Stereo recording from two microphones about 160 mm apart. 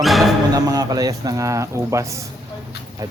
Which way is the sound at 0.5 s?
25° right (ahead or behind).